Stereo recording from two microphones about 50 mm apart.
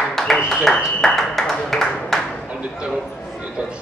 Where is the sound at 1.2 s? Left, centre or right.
Centre.